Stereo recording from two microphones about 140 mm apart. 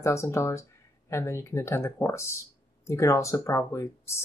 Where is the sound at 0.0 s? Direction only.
20° left (ahead or behind).